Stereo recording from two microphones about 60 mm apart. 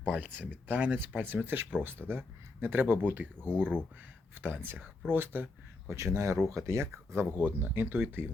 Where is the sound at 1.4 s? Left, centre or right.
Right.